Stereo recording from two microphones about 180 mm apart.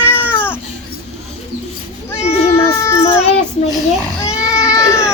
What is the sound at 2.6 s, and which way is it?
Baby cry, 15° left (ahead or behind).